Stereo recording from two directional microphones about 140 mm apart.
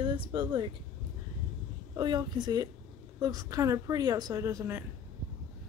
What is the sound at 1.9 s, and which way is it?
A woman's voice, 30° right (ahead or behind).